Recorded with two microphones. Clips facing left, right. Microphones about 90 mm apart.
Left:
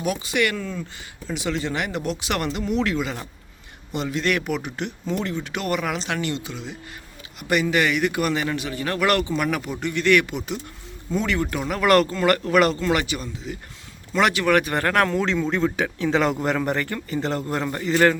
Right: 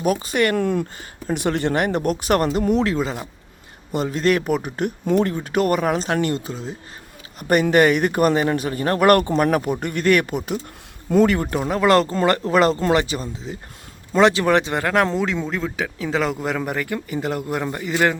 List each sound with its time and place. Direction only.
0.0 s a man's voice: 40° right (ahead or behind)
0.6 s a man's voice: 60° right (ahead or behind); by 15.2 s 20° right (ahead or behind)
15.4 s speech: centre (ahead or behind)